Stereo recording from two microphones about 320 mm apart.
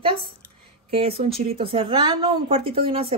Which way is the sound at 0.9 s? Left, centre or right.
Centre.